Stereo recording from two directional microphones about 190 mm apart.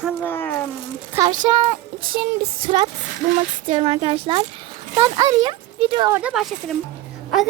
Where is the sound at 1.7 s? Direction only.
50° right (ahead or behind).